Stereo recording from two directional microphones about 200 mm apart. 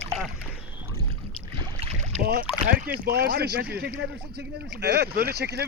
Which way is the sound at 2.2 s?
50° right (ahead or behind).